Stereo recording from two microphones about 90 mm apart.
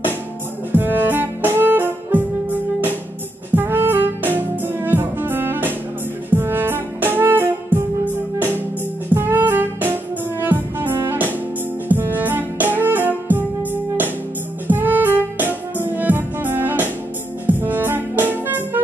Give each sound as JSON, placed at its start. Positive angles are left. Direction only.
{"t": 0.7, "sound": "music", "side_deg": -20}
{"t": 3.5, "sound": "music", "side_deg": -25}
{"t": 9.1, "sound": "music", "side_deg": -25}